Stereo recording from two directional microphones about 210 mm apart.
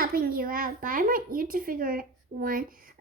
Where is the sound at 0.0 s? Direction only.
45° right (ahead or behind).